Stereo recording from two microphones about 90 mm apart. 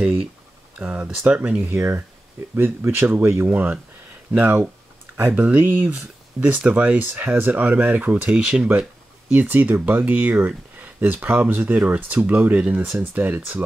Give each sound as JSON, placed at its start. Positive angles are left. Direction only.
{"t": 0.7, "sound": "speech", "side_deg": -15}
{"t": 12.9, "sound": "speech", "side_deg": -25}